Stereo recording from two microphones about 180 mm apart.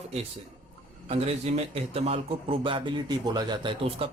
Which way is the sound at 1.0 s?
35° right (ahead or behind).